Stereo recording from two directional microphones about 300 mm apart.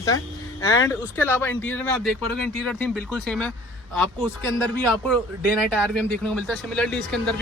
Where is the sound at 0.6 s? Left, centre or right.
Centre.